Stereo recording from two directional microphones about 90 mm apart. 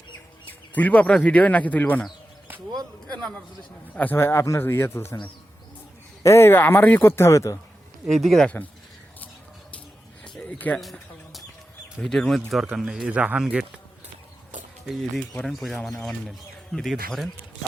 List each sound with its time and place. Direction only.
0.7 s a man's voice: 15° left (ahead or behind)
3.9 s speech: 20° left (ahead or behind)
6.2 s speech: 25° left (ahead or behind)
8.0 s speech: centre (ahead or behind)
8.4 s speech: 20° left (ahead or behind)
10.2 s a sound: 10° left (ahead or behind)
11.9 s speech: 5° left (ahead or behind)
14.8 s speech: centre (ahead or behind)